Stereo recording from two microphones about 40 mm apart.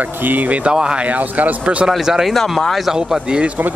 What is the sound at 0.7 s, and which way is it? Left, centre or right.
Speech, right.